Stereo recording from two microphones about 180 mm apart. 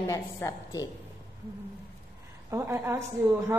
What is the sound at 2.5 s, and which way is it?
A woman's voice, 15° right (ahead or behind).